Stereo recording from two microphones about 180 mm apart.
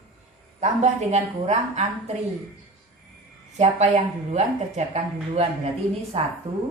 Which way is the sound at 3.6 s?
40° right (ahead or behind).